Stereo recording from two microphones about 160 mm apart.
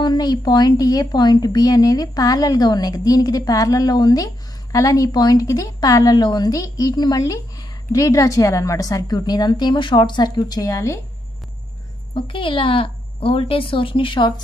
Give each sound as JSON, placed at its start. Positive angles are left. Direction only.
{"t": 0.0, "sound": "a woman's voice", "side_deg": 25}
{"t": 12.1, "sound": "a woman's voice", "side_deg": 35}